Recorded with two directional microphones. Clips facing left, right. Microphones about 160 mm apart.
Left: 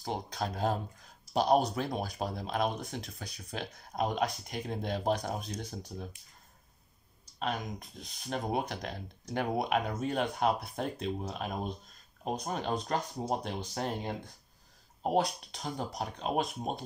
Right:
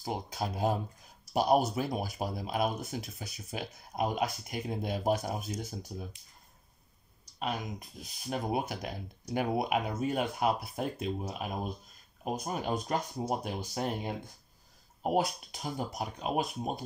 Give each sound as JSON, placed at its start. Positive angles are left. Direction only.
{"t": 0.0, "sound": "speech", "side_deg": -10}
{"t": 7.3, "sound": "speech", "side_deg": -5}